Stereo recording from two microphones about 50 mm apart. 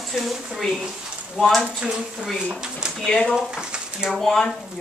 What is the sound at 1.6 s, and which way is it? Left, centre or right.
Speech, centre.